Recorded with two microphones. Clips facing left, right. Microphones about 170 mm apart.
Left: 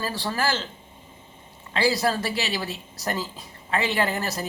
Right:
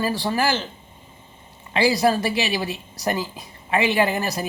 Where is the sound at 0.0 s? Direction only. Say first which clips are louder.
Right 5 dB; 15° right (ahead or behind).